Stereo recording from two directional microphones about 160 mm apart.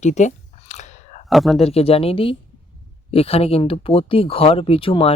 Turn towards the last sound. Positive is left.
turn(degrees=35)  # may be behind; listen again after turning